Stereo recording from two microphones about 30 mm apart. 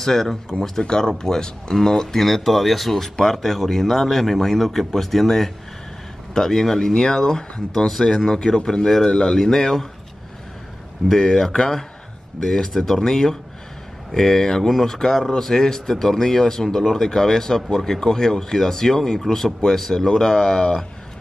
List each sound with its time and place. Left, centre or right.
0.0 s speech: centre
0.5 s speech: left
2.2 s speech: centre
11.1 s speech: centre